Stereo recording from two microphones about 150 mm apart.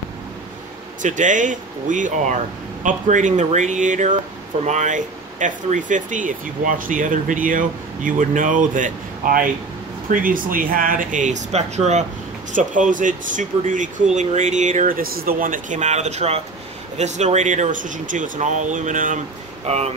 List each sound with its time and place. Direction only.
1.0 s speech: 55° right (ahead or behind)
12.5 s speech: 60° right (ahead or behind)
19.6 s speech: 45° right (ahead or behind)